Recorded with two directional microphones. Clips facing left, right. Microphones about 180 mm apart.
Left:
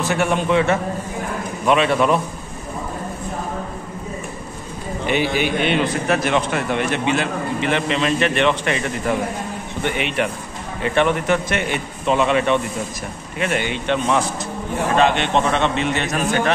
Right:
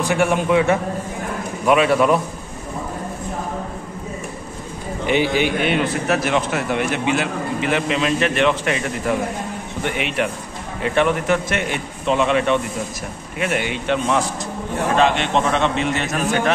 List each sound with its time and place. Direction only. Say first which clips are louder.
0.1 s a man's voice: right 1 dB; 10° right (ahead or behind)
5.0 s a man's voice: right 2 dB; 15° right (ahead or behind)
5.7 s a man's voice: even; 5° right (ahead or behind)